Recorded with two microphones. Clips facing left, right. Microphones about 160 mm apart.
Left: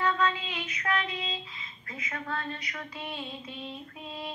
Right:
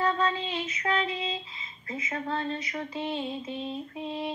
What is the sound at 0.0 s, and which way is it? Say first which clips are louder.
Child singing: right 1 dB; 30° right (ahead or behind).